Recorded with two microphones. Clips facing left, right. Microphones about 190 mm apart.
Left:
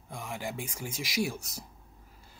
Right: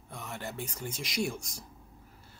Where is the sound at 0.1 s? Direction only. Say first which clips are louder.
Left 3 dB; 10° left (ahead or behind).